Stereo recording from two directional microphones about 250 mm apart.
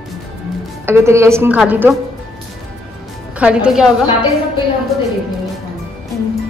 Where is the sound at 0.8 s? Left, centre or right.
Centre.